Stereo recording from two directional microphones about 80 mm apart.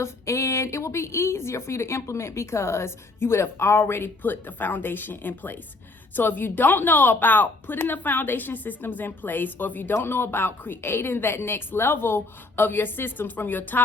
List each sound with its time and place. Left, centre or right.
0.0 s a woman's voice: left